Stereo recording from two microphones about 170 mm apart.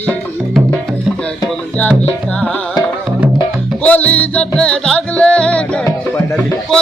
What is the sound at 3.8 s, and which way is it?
Music, 10° left (ahead or behind).